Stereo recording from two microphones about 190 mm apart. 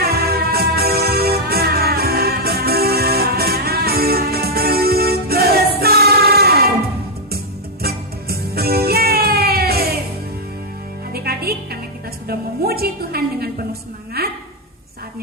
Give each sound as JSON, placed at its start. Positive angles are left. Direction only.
{"t": 0.0, "sound": "music", "side_deg": -55}
{"t": 7.8, "sound": "music", "side_deg": -55}
{"t": 11.1, "sound": "music", "side_deg": -55}
{"t": 14.2, "sound": "a sound", "side_deg": -55}